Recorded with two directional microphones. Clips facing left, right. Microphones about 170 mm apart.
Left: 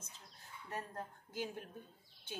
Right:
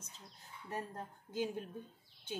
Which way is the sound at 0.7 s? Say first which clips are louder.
Right 2 dB; 15° right (ahead or behind).